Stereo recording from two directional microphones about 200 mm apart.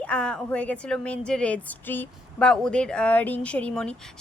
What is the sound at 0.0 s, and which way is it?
A woman's voice, 5° left (ahead or behind).